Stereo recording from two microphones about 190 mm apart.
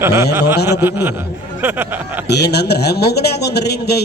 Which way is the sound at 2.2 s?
60° left (ahead or behind).